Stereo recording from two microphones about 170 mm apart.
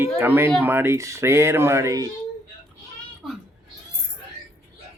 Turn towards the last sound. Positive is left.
turn(degrees=0)  # may be behind; listen again after turning